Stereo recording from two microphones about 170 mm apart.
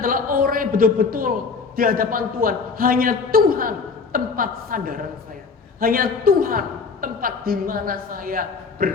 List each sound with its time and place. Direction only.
0.0 s a man's voice: 55° right (ahead or behind)